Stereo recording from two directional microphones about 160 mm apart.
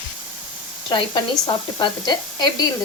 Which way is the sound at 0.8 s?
30° left (ahead or behind).